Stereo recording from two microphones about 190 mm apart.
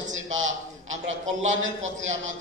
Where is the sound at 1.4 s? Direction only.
40° right (ahead or behind).